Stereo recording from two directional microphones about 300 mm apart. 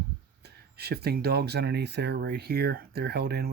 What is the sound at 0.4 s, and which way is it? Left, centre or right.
Speech, right.